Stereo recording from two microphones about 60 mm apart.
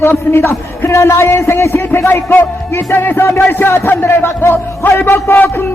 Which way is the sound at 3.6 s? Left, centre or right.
Left.